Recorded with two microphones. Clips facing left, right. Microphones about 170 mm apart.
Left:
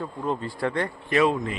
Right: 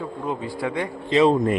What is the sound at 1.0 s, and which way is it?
Speech, 25° right (ahead or behind).